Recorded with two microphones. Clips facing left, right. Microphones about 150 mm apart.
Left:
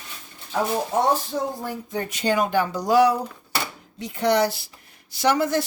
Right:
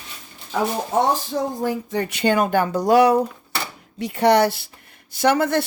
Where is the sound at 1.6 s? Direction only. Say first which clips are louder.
Right 6 dB; 90° right; by 4.6 s 65° right (ahead or behind).